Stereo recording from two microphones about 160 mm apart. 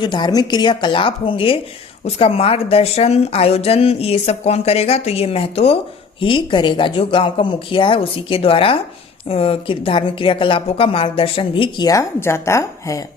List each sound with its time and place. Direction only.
0.0 s a woman's voice: 25° left (ahead or behind)